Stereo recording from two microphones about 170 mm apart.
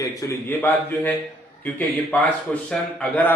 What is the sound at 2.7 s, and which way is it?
Speech, 10° left (ahead or behind).